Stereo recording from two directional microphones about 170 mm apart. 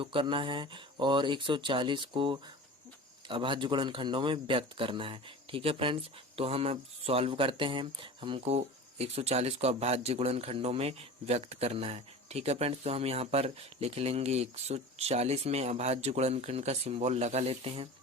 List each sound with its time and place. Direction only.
0.0 s a man's voice: 30° right (ahead or behind)